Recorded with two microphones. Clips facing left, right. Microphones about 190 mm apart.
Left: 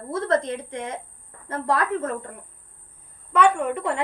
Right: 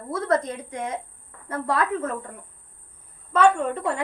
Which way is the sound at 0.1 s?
25° left (ahead or behind).